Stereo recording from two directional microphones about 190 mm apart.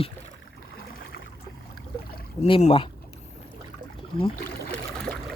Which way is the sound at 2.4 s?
30° left (ahead or behind).